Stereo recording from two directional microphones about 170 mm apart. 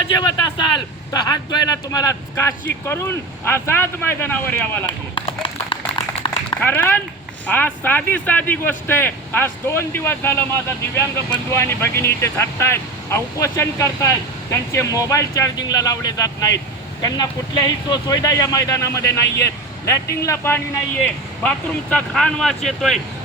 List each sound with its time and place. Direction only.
0.2 s speech: 25° left (ahead or behind)
5.1 s run: 30° left (ahead or behind)
6.3 s a sound: 30° left (ahead or behind)
6.6 s speech: 10° left (ahead or behind)